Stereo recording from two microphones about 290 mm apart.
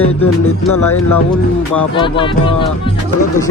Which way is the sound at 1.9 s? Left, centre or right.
Centre.